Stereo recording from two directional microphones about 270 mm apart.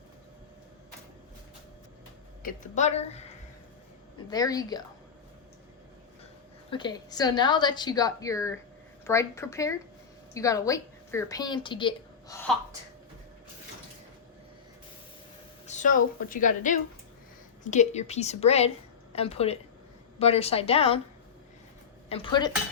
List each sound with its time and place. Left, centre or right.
2.4 s a woman's voice: left
4.3 s a woman's voice: centre
6.7 s a woman's voice: centre
15.6 s a woman's voice: left
22.1 s a woman's voice: centre